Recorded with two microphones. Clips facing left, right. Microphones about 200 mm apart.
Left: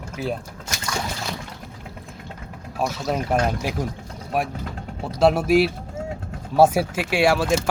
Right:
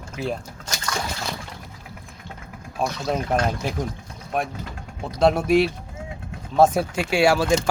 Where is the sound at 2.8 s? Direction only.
5° left (ahead or behind).